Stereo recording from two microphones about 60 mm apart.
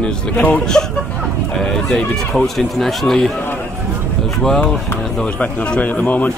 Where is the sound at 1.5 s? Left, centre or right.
Centre.